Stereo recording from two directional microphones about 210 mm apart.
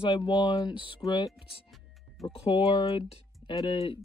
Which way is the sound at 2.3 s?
25° left (ahead or behind).